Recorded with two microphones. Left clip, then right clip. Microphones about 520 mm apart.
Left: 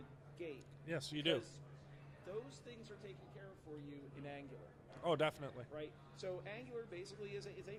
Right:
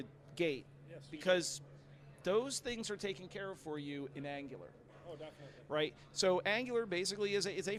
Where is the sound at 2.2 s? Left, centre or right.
Right.